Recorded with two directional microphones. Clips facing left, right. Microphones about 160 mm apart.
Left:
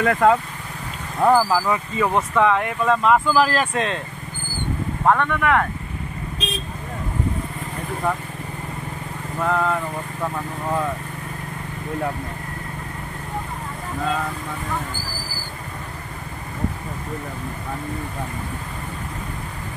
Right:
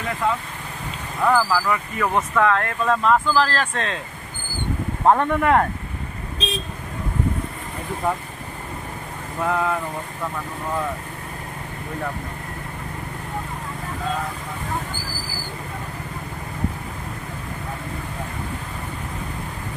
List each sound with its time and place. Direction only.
0.0 s speech: 60° left (ahead or behind)
1.2 s speech: 25° left (ahead or behind)
5.0 s speech: 30° right (ahead or behind)
9.4 s speech: 5° right (ahead or behind)